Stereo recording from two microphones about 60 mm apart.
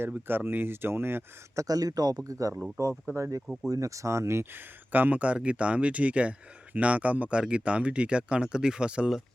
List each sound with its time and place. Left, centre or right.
0.1 s speech: right
1.5 s speech: right
3.2 s speech: right
3.4 s speech: centre
3.7 s speech: right
4.9 s speech: right